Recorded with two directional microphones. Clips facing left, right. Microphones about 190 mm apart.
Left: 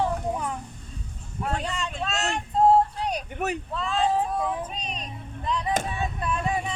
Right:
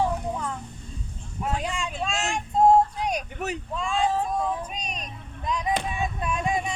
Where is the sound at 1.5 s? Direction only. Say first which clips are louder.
Right 1 dB; 10° right (ahead or behind).